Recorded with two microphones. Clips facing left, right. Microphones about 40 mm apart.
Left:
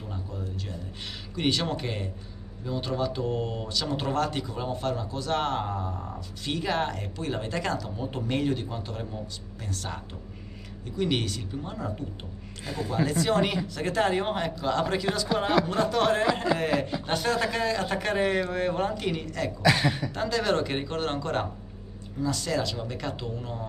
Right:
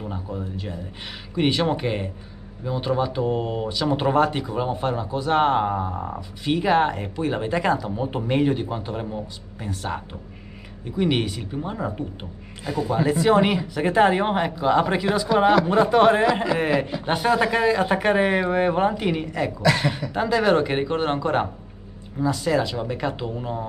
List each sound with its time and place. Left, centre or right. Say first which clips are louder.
0.0 s a sound: right 6 dB; right
1.3 s speech: right 6 dB; centre
12.6 s speech: right 7 dB; right
12.9 s speech: right 6 dB; centre